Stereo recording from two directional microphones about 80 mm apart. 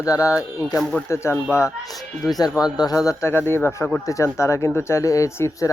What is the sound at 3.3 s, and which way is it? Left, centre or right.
Speech, left.